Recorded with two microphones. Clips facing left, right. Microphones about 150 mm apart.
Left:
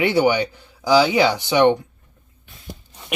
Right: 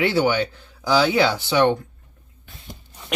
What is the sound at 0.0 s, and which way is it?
Speech, 15° left (ahead or behind).